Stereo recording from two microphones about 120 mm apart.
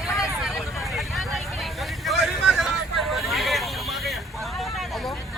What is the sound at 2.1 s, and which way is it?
Vehicle, centre (ahead or behind).